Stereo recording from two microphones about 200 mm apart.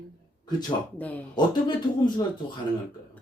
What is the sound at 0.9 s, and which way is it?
Speech, 10° left (ahead or behind).